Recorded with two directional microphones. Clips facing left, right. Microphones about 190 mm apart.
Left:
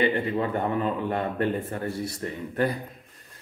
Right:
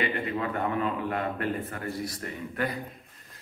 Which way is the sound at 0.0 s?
30° left (ahead or behind).